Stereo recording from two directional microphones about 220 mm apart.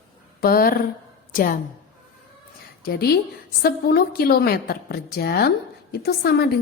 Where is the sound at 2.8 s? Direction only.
45° left (ahead or behind).